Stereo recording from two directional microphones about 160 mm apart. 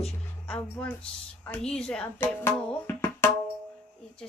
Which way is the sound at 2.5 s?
10° left (ahead or behind).